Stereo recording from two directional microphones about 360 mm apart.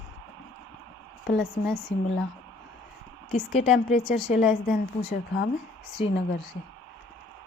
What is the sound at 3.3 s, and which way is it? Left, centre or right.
Speech, centre.